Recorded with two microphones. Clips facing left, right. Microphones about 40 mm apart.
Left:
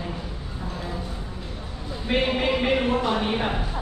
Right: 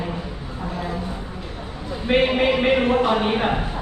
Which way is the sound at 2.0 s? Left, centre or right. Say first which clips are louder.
Right 5 dB; right.